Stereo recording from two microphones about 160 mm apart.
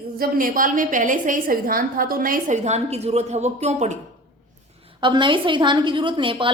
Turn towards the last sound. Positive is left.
turn(degrees=-30)  # may be behind; listen again after turning